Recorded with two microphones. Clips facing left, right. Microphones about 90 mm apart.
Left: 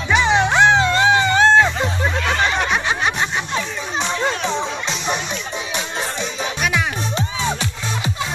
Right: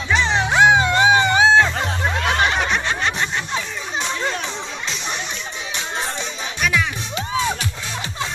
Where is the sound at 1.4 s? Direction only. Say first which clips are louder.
Left 2 dB; centre (ahead or behind).